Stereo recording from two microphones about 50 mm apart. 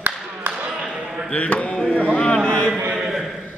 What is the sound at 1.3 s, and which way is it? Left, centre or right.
Chop, left.